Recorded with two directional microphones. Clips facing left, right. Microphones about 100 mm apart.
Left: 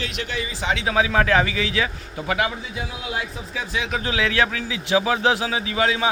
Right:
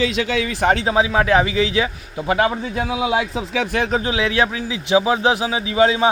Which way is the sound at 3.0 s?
90° right.